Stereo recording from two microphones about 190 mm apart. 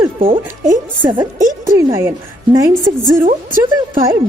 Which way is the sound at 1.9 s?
15° right (ahead or behind).